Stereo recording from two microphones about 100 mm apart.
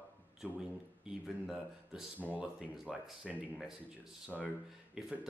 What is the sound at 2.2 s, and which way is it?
Speech, 15° right (ahead or behind).